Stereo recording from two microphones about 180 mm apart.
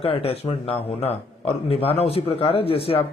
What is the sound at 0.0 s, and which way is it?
A man's voice, 35° left (ahead or behind).